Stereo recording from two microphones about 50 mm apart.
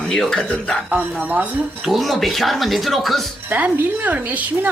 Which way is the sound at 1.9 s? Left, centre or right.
Centre.